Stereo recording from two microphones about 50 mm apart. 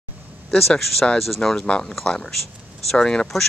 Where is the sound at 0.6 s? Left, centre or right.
Centre.